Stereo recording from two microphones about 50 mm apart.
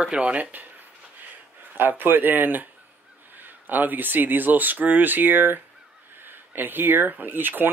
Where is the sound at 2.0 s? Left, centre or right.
Right.